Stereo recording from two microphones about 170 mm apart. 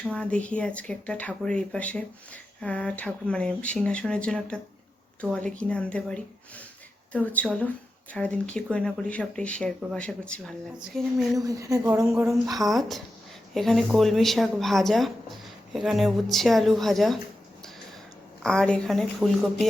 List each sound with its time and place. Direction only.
0.0 s speech: 5° left (ahead or behind)
11.3 s a woman's voice: 20° right (ahead or behind)
12.5 s speech: centre (ahead or behind)
18.4 s speech: 5° left (ahead or behind)